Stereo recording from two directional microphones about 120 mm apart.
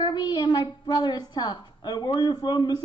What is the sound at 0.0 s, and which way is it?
A woman's voice, 40° left (ahead or behind).